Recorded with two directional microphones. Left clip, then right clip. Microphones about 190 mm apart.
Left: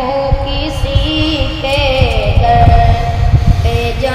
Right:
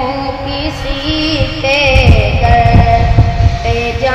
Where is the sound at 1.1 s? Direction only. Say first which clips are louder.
Right 1 dB; 35° right (ahead or behind).